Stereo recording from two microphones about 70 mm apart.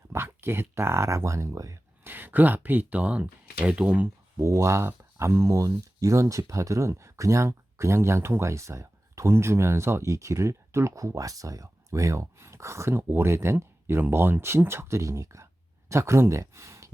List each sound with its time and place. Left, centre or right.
0.1 s speech: right
2.0 s speech: right
4.4 s speech: right